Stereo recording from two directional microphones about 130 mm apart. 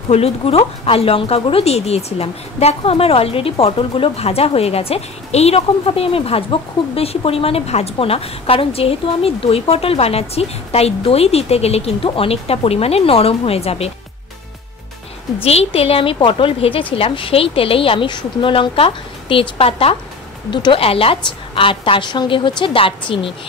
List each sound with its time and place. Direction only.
0.1 s speech: 50° left (ahead or behind)
15.4 s a woman's voice: 50° left (ahead or behind)